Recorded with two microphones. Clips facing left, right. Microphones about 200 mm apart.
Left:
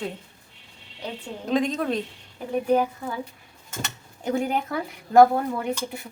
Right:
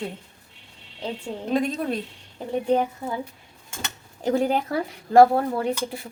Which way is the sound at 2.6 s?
25° right (ahead or behind).